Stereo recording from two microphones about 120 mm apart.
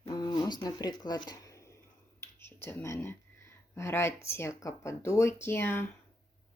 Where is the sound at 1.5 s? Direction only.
25° left (ahead or behind).